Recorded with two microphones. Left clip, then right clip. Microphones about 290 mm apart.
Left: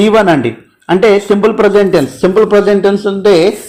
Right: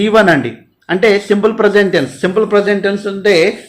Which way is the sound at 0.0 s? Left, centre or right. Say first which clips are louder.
Left 2 dB; centre.